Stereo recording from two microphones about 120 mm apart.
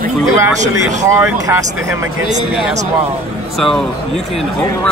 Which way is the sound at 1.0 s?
20° right (ahead or behind).